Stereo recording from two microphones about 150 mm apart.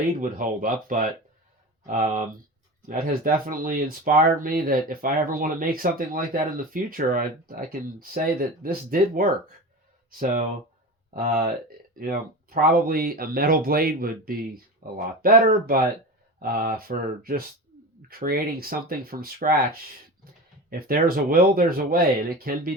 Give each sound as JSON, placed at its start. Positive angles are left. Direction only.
{"t": 0.2, "sound": "speech", "side_deg": -65}
{"t": 18.1, "sound": "speech", "side_deg": -80}
{"t": 20.7, "sound": "speech", "side_deg": -75}